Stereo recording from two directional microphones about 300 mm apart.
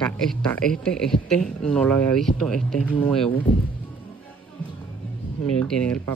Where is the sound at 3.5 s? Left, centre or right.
Centre.